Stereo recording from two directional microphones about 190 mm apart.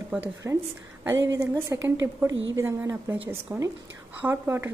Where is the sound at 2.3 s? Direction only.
80° right.